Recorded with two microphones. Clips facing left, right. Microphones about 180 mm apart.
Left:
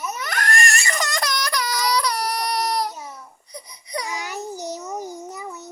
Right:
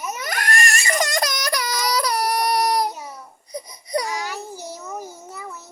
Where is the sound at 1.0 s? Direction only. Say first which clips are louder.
Right 2 dB; 45° right (ahead or behind).